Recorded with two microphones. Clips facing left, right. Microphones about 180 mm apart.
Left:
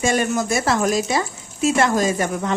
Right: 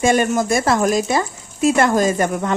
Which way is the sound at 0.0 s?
50° right (ahead or behind).